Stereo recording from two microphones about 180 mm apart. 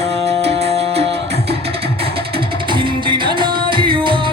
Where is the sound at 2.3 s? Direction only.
25° right (ahead or behind).